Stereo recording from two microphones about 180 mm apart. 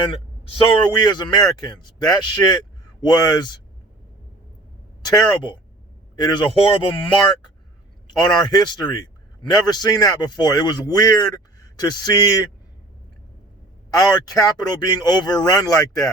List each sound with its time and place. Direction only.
0.0 s a man's voice: 30° left (ahead or behind)
5.0 s a man's voice: 20° left (ahead or behind)
8.4 s a man's voice: 25° left (ahead or behind)
13.9 s a man's voice: 20° left (ahead or behind)